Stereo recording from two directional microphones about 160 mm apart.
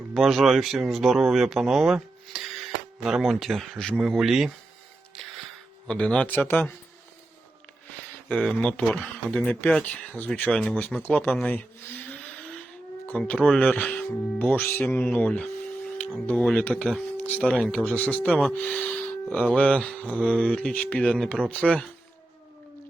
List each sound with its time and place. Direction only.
0.1 s speech: centre (ahead or behind)
5.1 s music: centre (ahead or behind)
5.9 s speech: 5° left (ahead or behind)
8.3 s speech: 5° left (ahead or behind)
12.0 s vehicle: 10° left (ahead or behind)
13.1 s speech: 10° left (ahead or behind)